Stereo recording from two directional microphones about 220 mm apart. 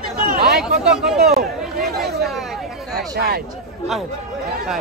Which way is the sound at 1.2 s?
45° right (ahead or behind).